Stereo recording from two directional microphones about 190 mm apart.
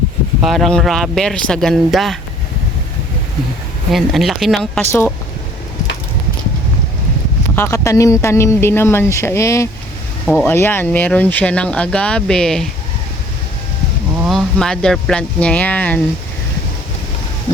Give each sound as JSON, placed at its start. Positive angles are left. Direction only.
{"t": 0.4, "sound": "speech", "side_deg": 0}
{"t": 3.9, "sound": "speech", "side_deg": 0}
{"t": 4.9, "sound": "speech", "side_deg": 15}
{"t": 7.5, "sound": "speech", "side_deg": 15}
{"t": 14.2, "sound": "speech", "side_deg": 0}